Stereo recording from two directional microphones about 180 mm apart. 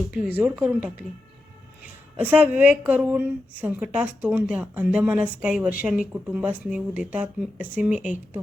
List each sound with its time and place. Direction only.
0.1 s speech: 10° right (ahead or behind)
2.1 s a woman's voice: 10° right (ahead or behind)